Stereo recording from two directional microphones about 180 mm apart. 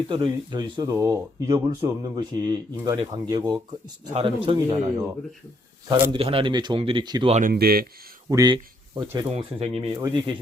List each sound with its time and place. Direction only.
0.1 s speech: 25° right (ahead or behind)
5.9 s speech: 30° right (ahead or behind)
7.5 s speech: 60° right (ahead or behind)
8.3 s speech: 20° right (ahead or behind)
9.3 s speech: 35° right (ahead or behind)